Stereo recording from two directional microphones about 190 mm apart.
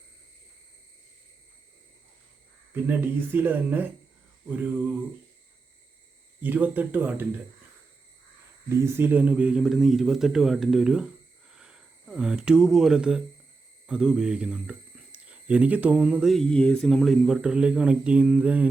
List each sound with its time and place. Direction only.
2.8 s speech: 10° right (ahead or behind)
6.4 s speech: 10° right (ahead or behind)
8.7 s speech: 15° right (ahead or behind)